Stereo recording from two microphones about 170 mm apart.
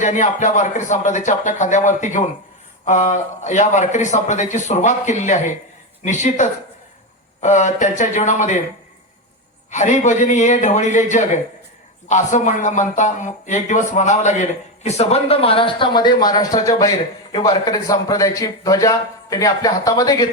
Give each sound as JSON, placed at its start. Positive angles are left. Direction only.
{"t": 0.0, "sound": "a man's voice", "side_deg": 45}
{"t": 9.6, "sound": "a man's voice", "side_deg": 45}